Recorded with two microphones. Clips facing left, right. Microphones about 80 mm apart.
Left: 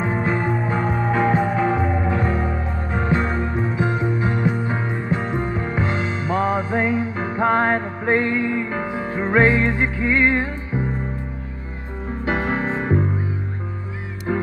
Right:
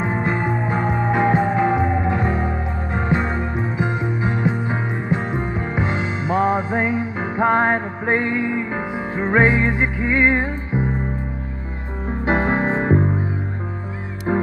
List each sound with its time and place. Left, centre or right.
0.0 s music: centre
12.3 s music: right
14.3 s music: right